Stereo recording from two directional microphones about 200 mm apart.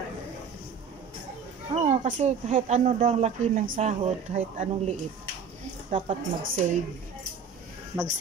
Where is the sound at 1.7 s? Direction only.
35° right (ahead or behind).